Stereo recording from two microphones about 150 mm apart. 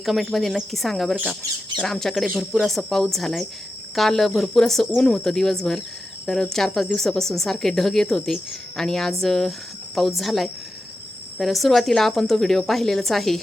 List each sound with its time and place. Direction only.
0.0 s speech: centre (ahead or behind)